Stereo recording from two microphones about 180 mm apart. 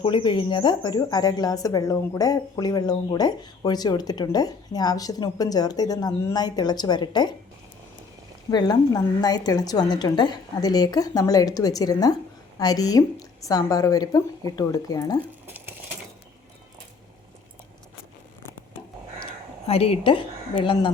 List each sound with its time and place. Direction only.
0.0 s speech: 25° left (ahead or behind)
8.4 s speech: 25° left (ahead or behind)
15.4 s a sound: 10° right (ahead or behind)
19.2 s a woman's voice: 35° left (ahead or behind)